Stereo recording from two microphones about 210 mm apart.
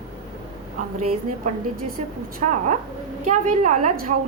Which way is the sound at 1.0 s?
30° right (ahead or behind).